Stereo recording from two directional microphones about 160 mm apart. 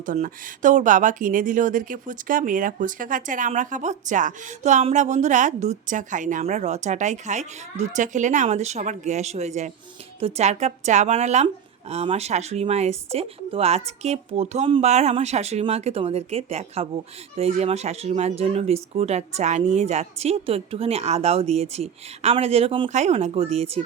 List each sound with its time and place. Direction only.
0.0 s speech: 55° right (ahead or behind); by 22.9 s 35° right (ahead or behind)
22.9 s speech: 45° right (ahead or behind)